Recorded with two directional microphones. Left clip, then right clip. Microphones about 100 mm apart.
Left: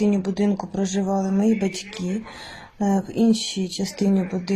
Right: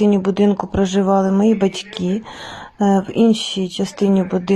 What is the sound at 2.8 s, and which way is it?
Speech, 60° right (ahead or behind).